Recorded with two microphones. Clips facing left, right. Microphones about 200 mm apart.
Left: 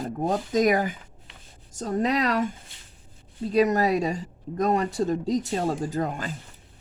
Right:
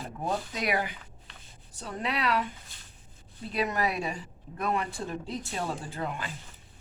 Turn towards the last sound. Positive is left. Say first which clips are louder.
# left 7 dB
turn(degrees=40)  # may be behind; listen again after turning